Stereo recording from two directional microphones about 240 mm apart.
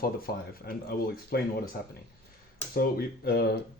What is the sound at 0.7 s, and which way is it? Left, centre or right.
Speech, left.